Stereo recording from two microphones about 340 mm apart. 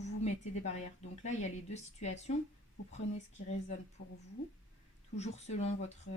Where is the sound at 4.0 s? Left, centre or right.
Left.